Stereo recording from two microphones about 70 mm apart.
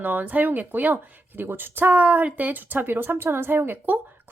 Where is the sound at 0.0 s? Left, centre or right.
Right.